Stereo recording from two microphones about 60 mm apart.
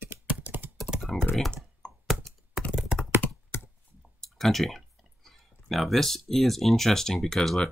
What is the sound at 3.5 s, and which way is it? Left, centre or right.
Computer keyboard, left.